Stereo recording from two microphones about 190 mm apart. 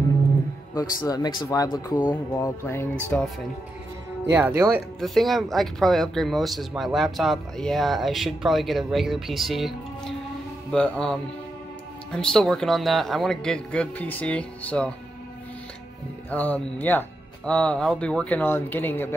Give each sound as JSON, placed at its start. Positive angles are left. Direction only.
{"t": 0.7, "sound": "speech", "side_deg": 20}
{"t": 4.3, "sound": "speech", "side_deg": -10}
{"t": 5.0, "sound": "speech", "side_deg": 0}
{"t": 16.3, "sound": "speech", "side_deg": 10}